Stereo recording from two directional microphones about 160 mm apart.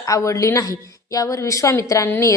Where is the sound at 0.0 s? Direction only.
20° left (ahead or behind).